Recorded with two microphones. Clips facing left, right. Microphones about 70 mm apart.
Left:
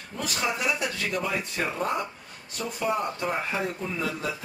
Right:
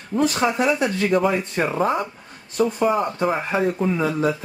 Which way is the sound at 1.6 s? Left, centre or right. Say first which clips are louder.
Right 9 dB; centre.